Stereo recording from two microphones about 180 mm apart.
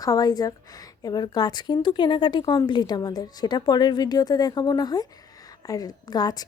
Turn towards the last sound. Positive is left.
turn(degrees=20)  # may be behind; listen again after turning